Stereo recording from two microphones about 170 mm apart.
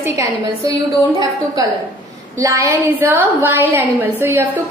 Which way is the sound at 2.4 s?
20° right (ahead or behind).